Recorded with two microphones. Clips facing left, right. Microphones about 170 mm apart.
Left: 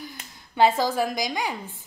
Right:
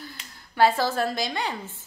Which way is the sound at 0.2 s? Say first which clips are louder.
Left 2 dB; 50° left (ahead or behind).